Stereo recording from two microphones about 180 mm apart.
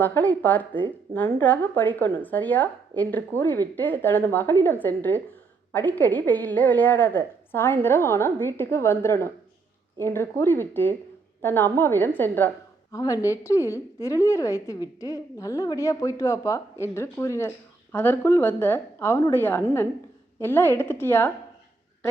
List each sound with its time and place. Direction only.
0.0 s a woman's voice: 10° left (ahead or behind)